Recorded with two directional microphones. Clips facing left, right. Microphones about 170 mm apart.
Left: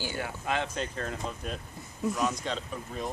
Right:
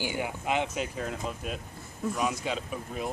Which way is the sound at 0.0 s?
15° right (ahead or behind).